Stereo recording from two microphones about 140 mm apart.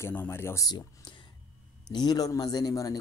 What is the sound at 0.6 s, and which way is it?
Speech, 30° left (ahead or behind).